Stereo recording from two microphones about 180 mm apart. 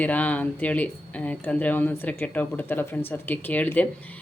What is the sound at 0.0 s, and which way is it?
Speech, 10° left (ahead or behind).